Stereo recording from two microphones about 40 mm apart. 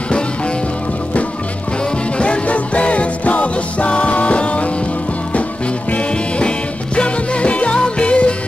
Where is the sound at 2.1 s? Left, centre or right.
Left.